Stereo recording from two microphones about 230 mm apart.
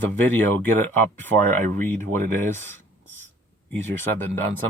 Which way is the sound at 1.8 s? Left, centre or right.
Centre.